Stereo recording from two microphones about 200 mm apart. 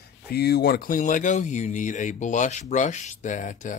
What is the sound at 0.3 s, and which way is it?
Speech, 50° left (ahead or behind).